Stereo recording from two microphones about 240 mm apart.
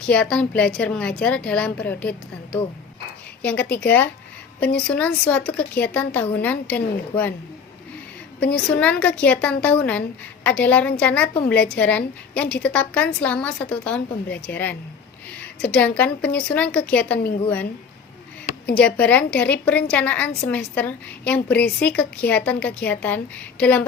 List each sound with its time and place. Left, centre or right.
0.0 s a woman's voice: centre
4.6 s a woman's voice: left
4.9 s a woman's voice: centre
8.4 s a woman's voice: left
8.8 s a woman's voice: centre
18.7 s a woman's voice: centre